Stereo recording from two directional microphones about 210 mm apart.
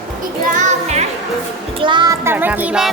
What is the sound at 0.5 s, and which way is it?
Music, 35° right (ahead or behind).